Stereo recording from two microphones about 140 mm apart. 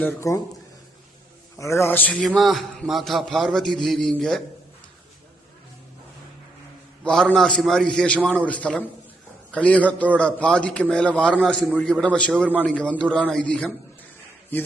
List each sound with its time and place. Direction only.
0.0 s speech: 20° left (ahead or behind)
1.5 s a man's voice: 20° left (ahead or behind); by 4.4 s 5° left (ahead or behind)
7.0 s a man's voice: 5° left (ahead or behind)